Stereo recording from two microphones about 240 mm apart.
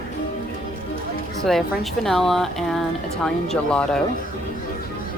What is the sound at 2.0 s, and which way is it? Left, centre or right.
Speech, centre.